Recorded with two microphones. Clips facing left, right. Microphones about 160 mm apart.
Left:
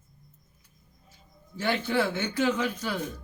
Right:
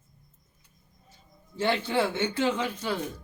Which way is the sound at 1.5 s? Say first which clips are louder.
Right 1 dB; 25° right (ahead or behind).